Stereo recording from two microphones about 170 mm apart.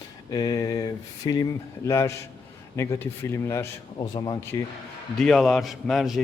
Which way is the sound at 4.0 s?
25° left (ahead or behind).